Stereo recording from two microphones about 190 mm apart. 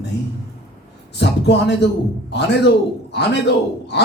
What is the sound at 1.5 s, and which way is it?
A man's voice, 65° left (ahead or behind).